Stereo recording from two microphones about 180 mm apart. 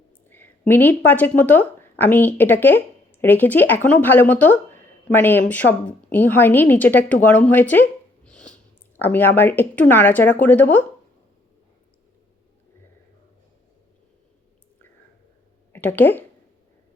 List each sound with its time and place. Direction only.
0.3 s speech: 10° left (ahead or behind)
15.7 s speech: 10° left (ahead or behind)